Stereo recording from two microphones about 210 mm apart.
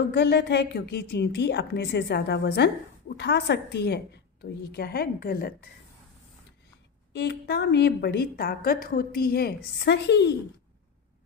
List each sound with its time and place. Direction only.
0.1 s a woman's voice: 50° left (ahead or behind)
7.1 s a woman's voice: 55° left (ahead or behind)